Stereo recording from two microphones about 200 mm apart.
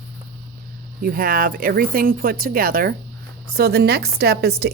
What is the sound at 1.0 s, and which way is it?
A woman's voice, 45° right (ahead or behind).